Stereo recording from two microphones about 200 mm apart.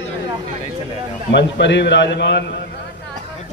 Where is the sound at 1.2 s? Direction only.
60° left (ahead or behind).